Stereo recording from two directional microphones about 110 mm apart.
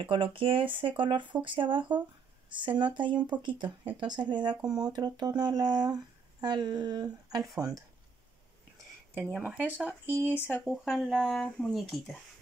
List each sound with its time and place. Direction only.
0.0 s speech: 50° right (ahead or behind); by 7.8 s 30° right (ahead or behind)
9.4 s speech: 15° right (ahead or behind)
10.6 s speech: centre (ahead or behind)